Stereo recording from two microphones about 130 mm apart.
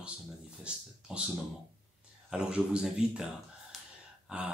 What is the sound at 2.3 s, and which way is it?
A man's voice, 5° right (ahead or behind).